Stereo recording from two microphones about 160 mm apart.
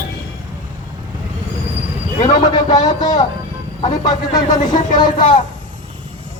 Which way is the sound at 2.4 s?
25° left (ahead or behind).